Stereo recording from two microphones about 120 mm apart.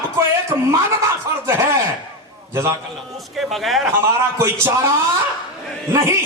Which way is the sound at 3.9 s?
20° right (ahead or behind).